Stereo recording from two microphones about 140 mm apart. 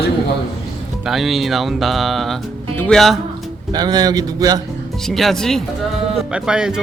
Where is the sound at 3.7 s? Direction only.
30° right (ahead or behind).